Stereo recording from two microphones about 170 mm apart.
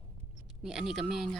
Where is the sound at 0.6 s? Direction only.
5° right (ahead or behind).